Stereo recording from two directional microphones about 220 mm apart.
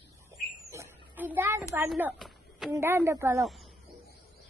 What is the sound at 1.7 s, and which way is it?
A child's voice, 10° right (ahead or behind).